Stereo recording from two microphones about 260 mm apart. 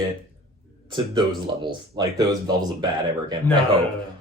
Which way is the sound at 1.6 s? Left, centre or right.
Centre.